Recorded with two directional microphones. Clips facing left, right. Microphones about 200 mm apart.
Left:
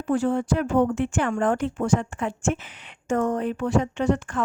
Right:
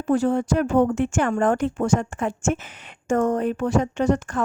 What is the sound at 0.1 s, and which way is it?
A woman's voice, 40° right (ahead or behind).